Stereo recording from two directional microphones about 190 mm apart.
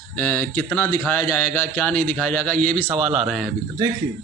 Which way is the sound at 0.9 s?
20° left (ahead or behind).